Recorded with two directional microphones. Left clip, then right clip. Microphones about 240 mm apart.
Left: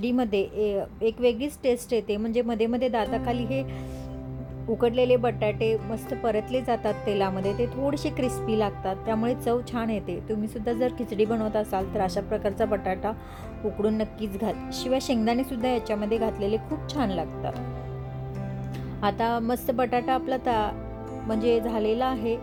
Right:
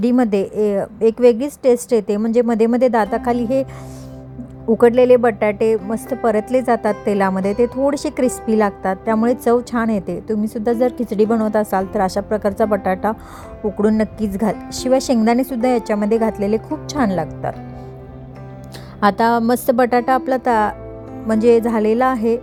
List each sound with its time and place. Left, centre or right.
0.0 s speech: right
4.8 s speech: right
18.9 s a woman's voice: right